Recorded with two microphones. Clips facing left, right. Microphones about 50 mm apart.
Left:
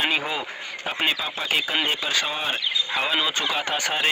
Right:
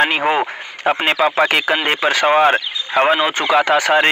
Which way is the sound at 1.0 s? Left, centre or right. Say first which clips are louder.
Right 10 dB; right.